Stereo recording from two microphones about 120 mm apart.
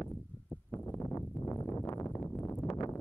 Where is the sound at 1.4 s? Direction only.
15° left (ahead or behind).